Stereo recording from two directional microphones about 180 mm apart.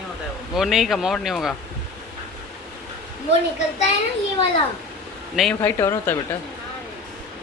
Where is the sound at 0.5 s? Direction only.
Centre (ahead or behind).